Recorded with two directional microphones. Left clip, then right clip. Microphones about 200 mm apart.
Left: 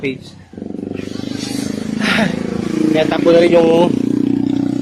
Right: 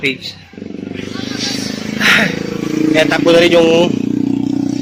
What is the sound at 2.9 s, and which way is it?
Speech, 5° left (ahead or behind).